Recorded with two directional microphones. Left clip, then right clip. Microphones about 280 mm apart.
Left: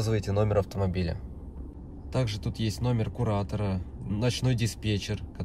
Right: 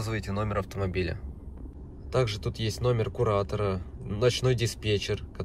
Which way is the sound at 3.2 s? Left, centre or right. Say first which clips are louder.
Right 5 dB; centre.